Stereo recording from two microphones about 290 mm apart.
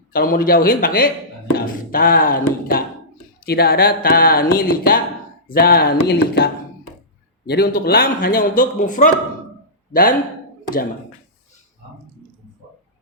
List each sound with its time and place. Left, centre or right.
0.1 s a man's voice: left